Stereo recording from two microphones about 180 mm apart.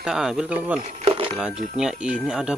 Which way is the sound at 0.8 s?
30° right (ahead or behind).